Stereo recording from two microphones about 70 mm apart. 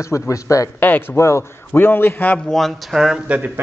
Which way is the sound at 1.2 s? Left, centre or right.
Left.